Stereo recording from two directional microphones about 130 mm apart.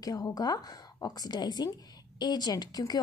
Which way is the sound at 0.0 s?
30° left (ahead or behind).